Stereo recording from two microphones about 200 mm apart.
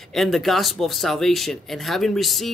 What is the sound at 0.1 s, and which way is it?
Speech, centre (ahead or behind).